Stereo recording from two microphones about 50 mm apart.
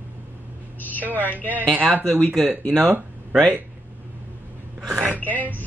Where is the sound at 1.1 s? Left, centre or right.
Left.